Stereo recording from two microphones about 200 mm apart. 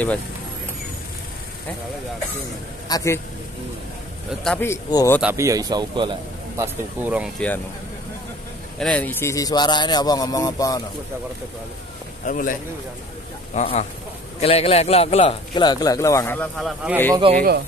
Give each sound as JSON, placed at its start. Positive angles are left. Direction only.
{"t": 2.9, "sound": "speech", "side_deg": 15}
{"t": 4.5, "sound": "speech", "side_deg": 10}
{"t": 5.2, "sound": "a man's voice", "side_deg": -15}
{"t": 7.3, "sound": "speech", "side_deg": 5}
{"t": 8.7, "sound": "speech", "side_deg": 5}
{"t": 12.3, "sound": "speech", "side_deg": 40}
{"t": 13.6, "sound": "a man's voice", "side_deg": 35}
{"t": 17.3, "sound": "speech", "side_deg": -50}